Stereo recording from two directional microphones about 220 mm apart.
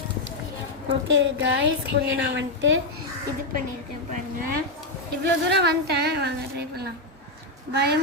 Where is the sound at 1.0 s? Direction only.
55° right (ahead or behind).